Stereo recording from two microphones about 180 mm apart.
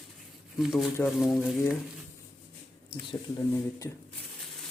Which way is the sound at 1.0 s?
Centre (ahead or behind).